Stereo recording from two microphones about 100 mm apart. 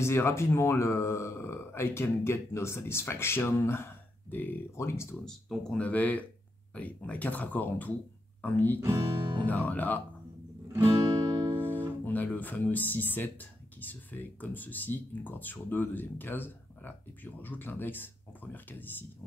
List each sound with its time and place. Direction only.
0.0 s speech: 25° left (ahead or behind)
5.2 s speech: 5° left (ahead or behind)
10.7 s music: 30° right (ahead or behind)
11.6 s guitar: 20° right (ahead or behind)
12.0 s speech: 15° left (ahead or behind)